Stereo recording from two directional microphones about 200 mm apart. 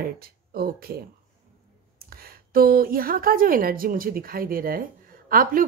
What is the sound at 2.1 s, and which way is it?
A woman's voice, 50° right (ahead or behind).